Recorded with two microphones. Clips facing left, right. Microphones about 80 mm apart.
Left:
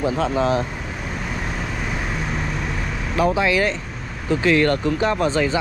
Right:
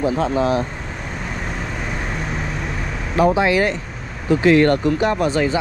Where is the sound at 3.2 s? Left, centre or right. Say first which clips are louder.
Right 3 dB; right.